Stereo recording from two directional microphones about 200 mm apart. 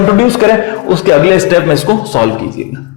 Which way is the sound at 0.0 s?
15° left (ahead or behind).